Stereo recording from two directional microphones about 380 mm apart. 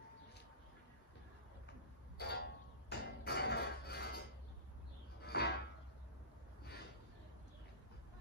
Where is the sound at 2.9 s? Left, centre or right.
Left.